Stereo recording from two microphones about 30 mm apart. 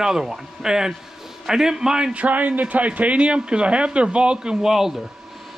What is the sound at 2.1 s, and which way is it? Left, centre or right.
A man's voice, right.